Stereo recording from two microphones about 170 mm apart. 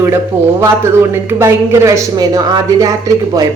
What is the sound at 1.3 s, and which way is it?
Speech, 15° right (ahead or behind).